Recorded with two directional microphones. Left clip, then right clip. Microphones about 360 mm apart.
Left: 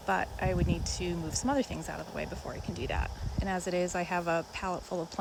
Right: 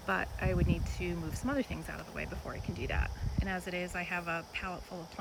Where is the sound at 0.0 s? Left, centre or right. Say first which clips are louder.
Left 3 dB; centre.